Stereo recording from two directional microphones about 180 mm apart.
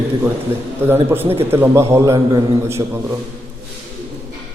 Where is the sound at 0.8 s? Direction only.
10° right (ahead or behind).